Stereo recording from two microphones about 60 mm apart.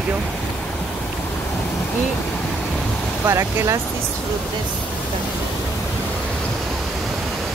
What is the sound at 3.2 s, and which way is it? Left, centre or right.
Speech, right.